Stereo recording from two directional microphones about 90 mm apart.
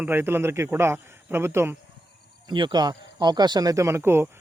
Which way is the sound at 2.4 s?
60° right (ahead or behind).